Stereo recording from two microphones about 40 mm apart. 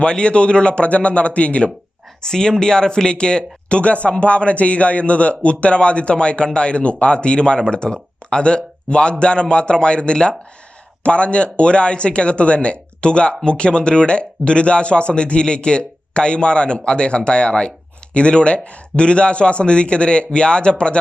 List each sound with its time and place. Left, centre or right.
0.0 s a man's voice: left
2.2 s speech: centre